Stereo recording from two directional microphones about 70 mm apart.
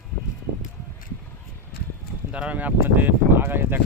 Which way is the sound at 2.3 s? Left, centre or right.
Centre.